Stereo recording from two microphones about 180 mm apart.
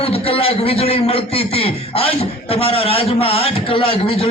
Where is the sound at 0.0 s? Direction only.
30° left (ahead or behind).